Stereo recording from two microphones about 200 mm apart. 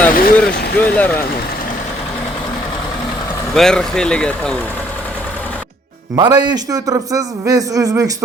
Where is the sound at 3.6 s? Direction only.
5° left (ahead or behind).